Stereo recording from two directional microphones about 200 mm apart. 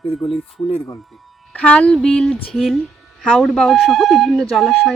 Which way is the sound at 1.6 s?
5° left (ahead or behind).